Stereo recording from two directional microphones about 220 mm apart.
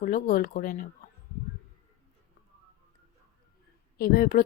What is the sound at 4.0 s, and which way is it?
Speech, 45° left (ahead or behind).